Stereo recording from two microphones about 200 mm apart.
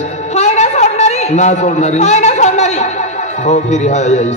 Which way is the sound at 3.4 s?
35° left (ahead or behind).